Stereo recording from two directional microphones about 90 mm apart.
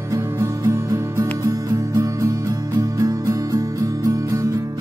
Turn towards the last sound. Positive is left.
turn(degrees=-40)  # may be behind; listen again after turning